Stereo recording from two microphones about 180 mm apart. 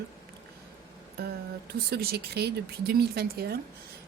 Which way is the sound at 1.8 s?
60° right (ahead or behind).